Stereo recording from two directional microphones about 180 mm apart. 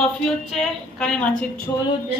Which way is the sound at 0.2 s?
5° left (ahead or behind).